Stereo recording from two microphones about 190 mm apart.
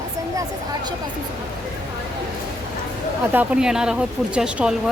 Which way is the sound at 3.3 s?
10° right (ahead or behind).